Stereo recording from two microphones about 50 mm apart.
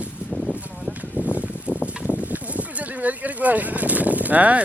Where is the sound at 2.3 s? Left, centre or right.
Right.